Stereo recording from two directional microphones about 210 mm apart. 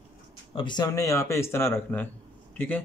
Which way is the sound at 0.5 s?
20° left (ahead or behind).